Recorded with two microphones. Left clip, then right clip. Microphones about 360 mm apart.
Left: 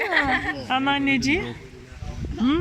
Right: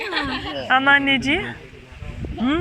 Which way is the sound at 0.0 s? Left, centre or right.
Left.